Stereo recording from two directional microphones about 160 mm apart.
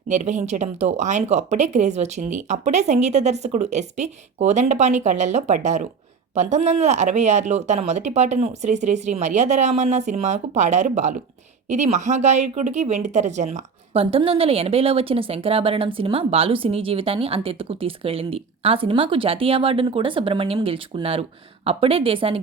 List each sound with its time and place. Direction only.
0.1 s speech: 45° right (ahead or behind)